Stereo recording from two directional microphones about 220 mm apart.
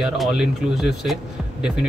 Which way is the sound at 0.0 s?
Centre (ahead or behind).